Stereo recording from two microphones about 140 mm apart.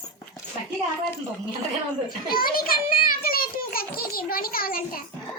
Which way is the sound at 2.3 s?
90° left.